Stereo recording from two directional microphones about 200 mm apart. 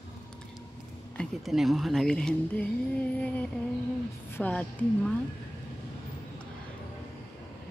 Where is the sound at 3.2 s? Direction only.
5° left (ahead or behind).